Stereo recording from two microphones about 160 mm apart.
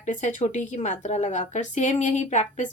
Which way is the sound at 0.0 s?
50° left (ahead or behind).